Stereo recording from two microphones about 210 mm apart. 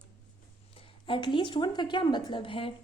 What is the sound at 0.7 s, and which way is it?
Speech, 25° left (ahead or behind).